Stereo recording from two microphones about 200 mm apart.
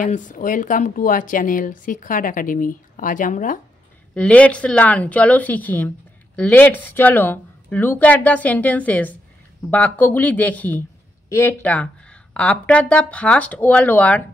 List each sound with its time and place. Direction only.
0.0 s a woman's voice: 40° left (ahead or behind)
4.1 s speech: 5° left (ahead or behind)